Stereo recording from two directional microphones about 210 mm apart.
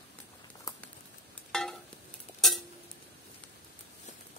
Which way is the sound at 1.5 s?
Centre (ahead or behind).